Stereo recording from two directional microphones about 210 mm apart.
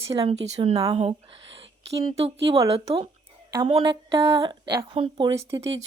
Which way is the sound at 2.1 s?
30° right (ahead or behind).